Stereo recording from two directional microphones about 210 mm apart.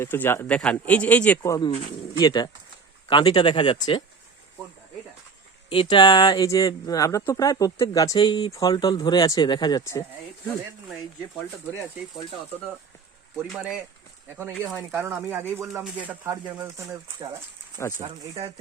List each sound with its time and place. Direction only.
0.0 s speech: 10° left (ahead or behind)
5.6 s speech: 25° left (ahead or behind)
13.5 s speech: centre (ahead or behind)
18.0 s speech: 25° right (ahead or behind)